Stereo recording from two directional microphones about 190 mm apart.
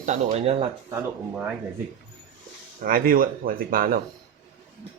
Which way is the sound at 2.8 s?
50° right (ahead or behind).